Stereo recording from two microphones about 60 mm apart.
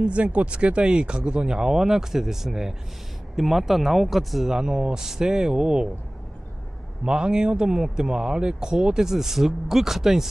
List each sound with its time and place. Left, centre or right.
0.0 s speech: right; by 4.6 s centre
4.6 s speech: centre
7.1 s speech: centre